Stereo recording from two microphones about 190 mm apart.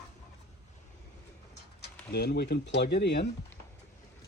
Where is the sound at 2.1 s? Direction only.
60° left (ahead or behind).